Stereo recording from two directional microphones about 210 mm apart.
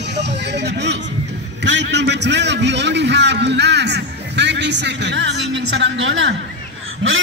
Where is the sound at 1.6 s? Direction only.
55° right (ahead or behind).